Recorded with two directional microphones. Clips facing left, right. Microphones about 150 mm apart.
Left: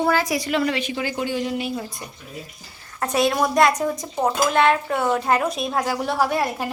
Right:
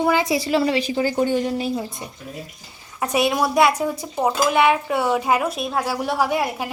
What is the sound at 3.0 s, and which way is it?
Speech, 10° right (ahead or behind).